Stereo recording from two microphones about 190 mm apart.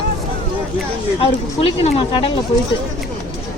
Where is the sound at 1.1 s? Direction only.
30° left (ahead or behind).